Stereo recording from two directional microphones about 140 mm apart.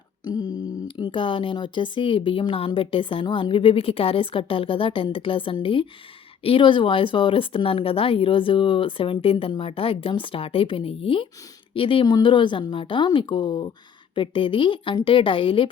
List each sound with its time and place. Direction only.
0.3 s speech: 30° left (ahead or behind)